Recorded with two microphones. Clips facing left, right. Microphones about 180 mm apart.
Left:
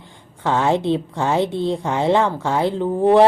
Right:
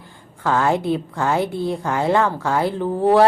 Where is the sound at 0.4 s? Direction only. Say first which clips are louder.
Left 1 dB; 20° left (ahead or behind).